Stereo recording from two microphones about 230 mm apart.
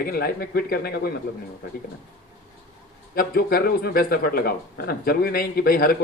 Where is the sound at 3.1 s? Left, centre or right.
Left.